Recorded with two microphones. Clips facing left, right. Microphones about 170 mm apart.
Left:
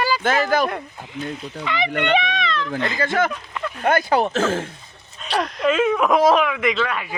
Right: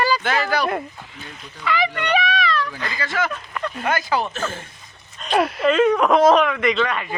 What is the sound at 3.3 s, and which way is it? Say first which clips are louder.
Speech: even; 15° left (ahead or behind).